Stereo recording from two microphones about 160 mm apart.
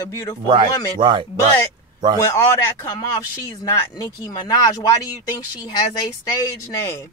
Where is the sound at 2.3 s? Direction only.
20° left (ahead or behind).